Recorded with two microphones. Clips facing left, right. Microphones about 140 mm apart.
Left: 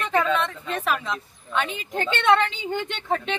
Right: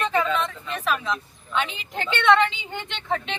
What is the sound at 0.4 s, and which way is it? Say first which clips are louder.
A woman's voice: left 1 dB; 55° left (ahead or behind).